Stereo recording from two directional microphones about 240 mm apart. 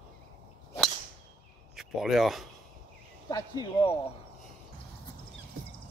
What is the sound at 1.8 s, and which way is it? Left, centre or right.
Speech, centre.